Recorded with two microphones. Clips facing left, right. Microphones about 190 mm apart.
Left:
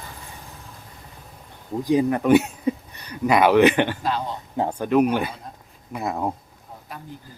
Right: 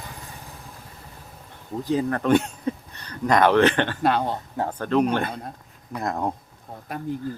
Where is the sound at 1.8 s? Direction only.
15° left (ahead or behind).